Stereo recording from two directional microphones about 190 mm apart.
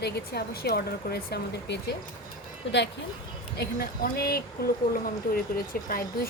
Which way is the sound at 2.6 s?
70° left (ahead or behind).